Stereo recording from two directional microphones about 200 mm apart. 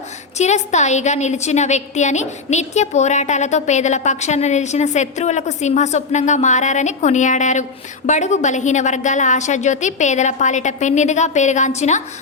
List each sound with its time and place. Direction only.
0.3 s a woman's voice: 35° left (ahead or behind)